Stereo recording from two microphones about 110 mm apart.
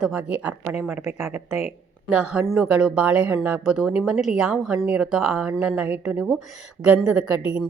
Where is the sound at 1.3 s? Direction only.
75° left (ahead or behind).